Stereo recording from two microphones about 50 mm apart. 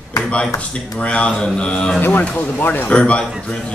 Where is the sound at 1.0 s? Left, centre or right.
Left.